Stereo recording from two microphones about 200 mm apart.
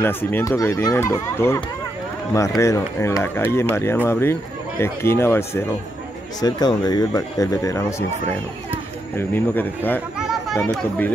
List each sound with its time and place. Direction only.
0.0 s speech: 10° left (ahead or behind)
9.1 s speech: 10° left (ahead or behind)